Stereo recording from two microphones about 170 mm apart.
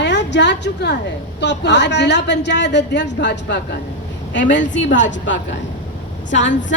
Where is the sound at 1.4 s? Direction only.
90° left.